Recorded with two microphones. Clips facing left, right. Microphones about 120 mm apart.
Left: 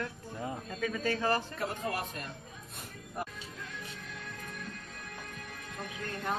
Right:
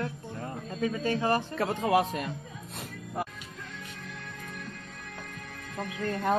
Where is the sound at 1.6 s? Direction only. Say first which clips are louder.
Right 9 dB; 90° right.